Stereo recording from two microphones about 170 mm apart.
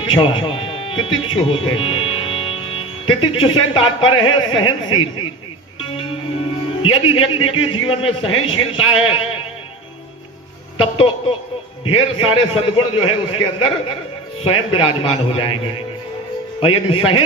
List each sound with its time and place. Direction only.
0.0 s speech: 30° left (ahead or behind)
5.8 s music: 30° left (ahead or behind)
6.8 s a man's voice: 30° left (ahead or behind)
10.9 s a man's voice: 35° left (ahead or behind)